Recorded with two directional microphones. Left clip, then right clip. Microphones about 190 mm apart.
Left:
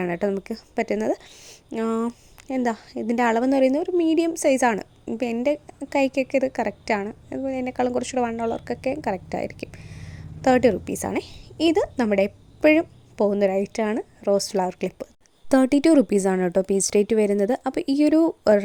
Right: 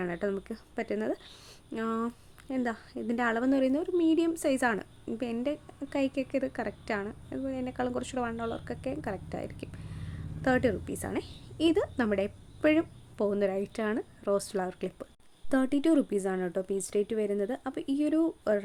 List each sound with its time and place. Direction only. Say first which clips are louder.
0.0 s a woman's voice: left 8 dB; 25° left (ahead or behind)
15.4 s a woman's voice: left 9 dB; 35° left (ahead or behind)